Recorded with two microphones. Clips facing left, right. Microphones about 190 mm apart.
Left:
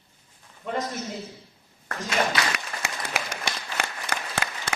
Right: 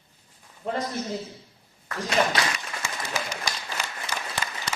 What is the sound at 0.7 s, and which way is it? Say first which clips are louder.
Speech: even; 35° right (ahead or behind).